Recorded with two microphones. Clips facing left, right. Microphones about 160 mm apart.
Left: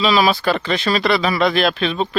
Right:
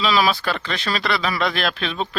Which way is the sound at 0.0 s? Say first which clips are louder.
Left 4 dB; 5° left (ahead or behind).